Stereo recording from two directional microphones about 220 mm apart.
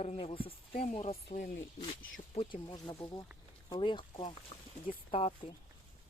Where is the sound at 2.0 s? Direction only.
60° left (ahead or behind).